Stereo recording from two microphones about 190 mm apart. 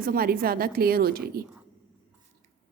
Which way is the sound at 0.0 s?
50° right (ahead or behind).